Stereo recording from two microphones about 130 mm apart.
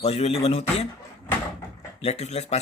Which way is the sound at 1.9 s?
50° left (ahead or behind).